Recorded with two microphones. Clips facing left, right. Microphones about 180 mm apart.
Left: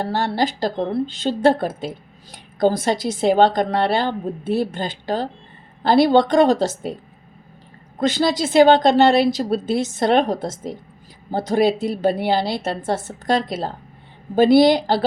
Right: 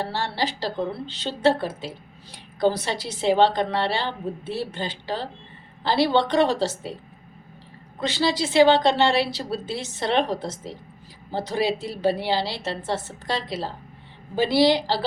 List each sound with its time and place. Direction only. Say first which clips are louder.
0.0 s a woman's voice: left 6 dB; 45° left (ahead or behind)
7.9 s a woman's voice: left 5 dB; 45° left (ahead or behind)